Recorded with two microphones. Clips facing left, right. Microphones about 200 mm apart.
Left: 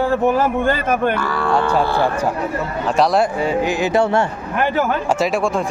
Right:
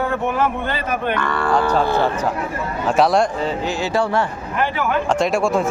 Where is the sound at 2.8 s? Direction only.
Centre (ahead or behind); by 4.3 s 25° left (ahead or behind).